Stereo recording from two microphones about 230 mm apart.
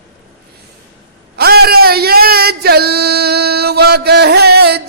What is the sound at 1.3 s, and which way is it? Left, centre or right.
Speech, right.